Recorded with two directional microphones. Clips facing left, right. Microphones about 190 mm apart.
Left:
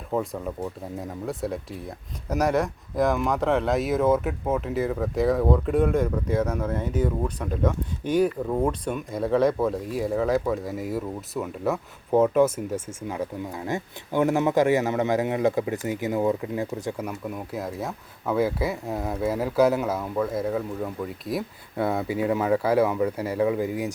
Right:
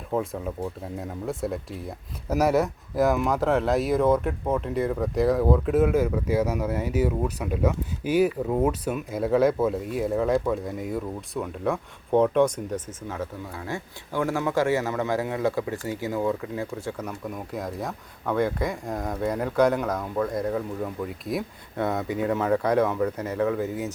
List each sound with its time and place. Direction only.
0.1 s speech: centre (ahead or behind)